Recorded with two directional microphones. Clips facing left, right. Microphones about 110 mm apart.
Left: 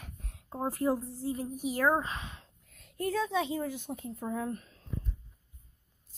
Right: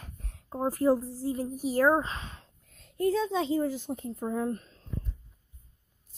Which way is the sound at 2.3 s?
30° right (ahead or behind).